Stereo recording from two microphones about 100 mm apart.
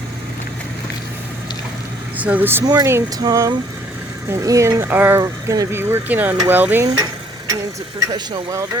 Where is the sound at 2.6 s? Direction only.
40° right (ahead or behind).